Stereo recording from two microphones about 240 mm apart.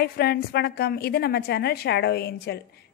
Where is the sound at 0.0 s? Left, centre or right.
Left.